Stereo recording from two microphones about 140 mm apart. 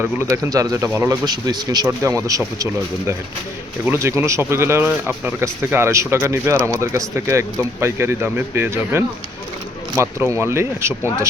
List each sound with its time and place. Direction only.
0.0 s speech: 15° right (ahead or behind)